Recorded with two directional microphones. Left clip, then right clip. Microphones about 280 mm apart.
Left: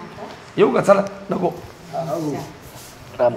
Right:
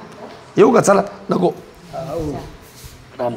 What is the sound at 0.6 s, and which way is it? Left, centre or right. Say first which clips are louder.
Speech: right 3 dB; right.